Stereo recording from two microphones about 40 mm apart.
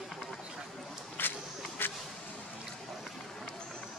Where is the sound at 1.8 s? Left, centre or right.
Left.